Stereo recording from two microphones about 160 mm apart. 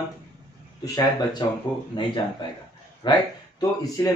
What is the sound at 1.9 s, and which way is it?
Speech, 30° left (ahead or behind).